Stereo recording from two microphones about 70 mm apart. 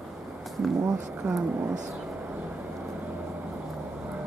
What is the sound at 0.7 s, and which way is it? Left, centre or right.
Speech, right.